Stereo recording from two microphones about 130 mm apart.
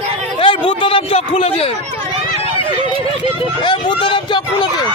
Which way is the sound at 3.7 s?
35° left (ahead or behind).